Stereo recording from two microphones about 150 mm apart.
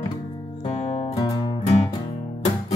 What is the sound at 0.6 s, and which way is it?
Music, 50° left (ahead or behind).